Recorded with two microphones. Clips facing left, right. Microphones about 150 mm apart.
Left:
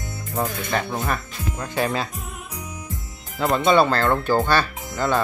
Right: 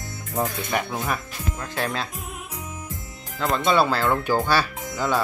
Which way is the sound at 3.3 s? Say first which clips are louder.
Left 3 dB; 5° left (ahead or behind).